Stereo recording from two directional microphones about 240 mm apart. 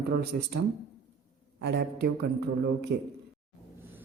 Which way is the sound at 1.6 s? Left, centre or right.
Right.